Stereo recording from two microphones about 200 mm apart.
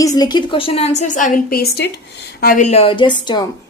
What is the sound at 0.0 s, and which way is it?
A woman's voice, 20° left (ahead or behind).